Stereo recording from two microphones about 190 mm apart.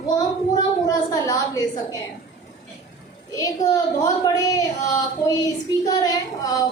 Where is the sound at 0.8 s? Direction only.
20° left (ahead or behind).